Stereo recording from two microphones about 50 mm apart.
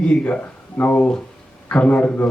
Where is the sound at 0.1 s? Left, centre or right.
Left.